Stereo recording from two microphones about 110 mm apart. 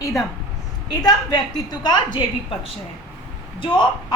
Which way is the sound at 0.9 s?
40° left (ahead or behind).